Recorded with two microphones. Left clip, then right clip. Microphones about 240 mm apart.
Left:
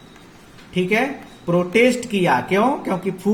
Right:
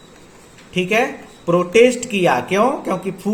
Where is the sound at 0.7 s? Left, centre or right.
Centre.